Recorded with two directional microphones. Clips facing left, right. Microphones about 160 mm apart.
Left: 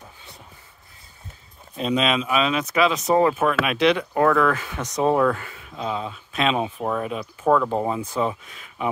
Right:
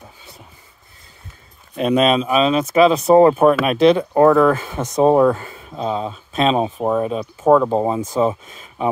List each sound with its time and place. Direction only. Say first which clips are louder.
1.8 s speech: right 7 dB; 60° right (ahead or behind)
2.0 s speech: right 6 dB; 35° right (ahead or behind); by 7.7 s 20° right (ahead or behind)
7.7 s speech: right 5 dB; 30° right (ahead or behind)
8.0 s speech: right 6 dB; 40° right (ahead or behind)